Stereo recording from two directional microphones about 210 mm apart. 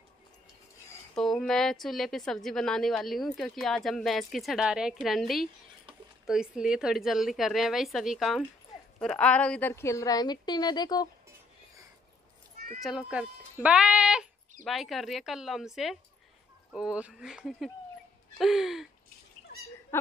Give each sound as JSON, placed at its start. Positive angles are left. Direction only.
{"t": 1.1, "sound": "a woman's voice", "side_deg": 0}
{"t": 12.8, "sound": "a woman's voice", "side_deg": -5}
{"t": 19.5, "sound": "a sound", "side_deg": 50}
{"t": 19.9, "sound": "speech", "side_deg": 10}